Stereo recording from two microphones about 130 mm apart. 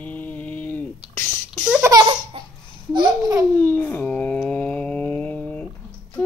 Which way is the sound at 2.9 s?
35° right (ahead or behind).